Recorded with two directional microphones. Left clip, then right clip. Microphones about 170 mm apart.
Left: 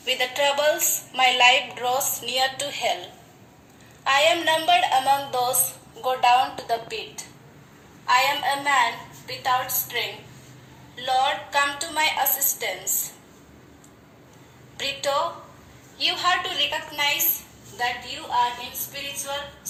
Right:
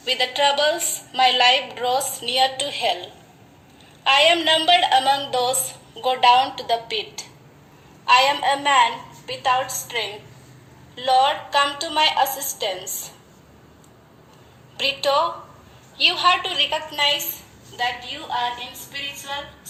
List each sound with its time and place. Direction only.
0.0 s a woman's voice: 40° right (ahead or behind)
8.0 s a woman's voice: 50° right (ahead or behind)
14.8 s a woman's voice: 40° right (ahead or behind)